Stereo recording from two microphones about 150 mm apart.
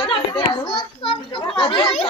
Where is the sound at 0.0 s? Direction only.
35° left (ahead or behind).